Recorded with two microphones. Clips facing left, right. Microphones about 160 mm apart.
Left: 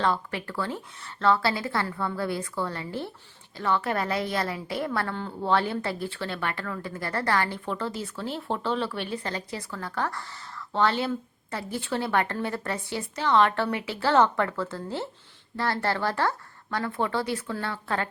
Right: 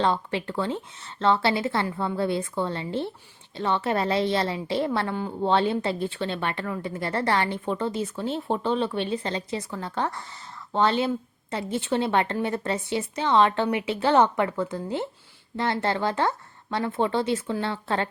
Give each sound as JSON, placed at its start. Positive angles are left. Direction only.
{"t": 0.0, "sound": "a woman's voice", "side_deg": -25}